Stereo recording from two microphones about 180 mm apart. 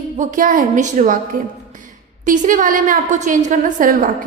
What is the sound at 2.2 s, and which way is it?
A woman's voice, 45° right (ahead or behind).